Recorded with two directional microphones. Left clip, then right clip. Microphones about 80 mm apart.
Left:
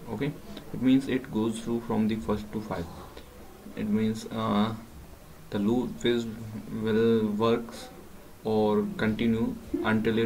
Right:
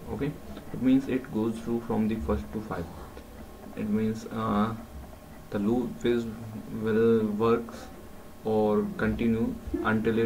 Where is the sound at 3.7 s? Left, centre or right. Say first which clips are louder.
Left 1 dB; centre.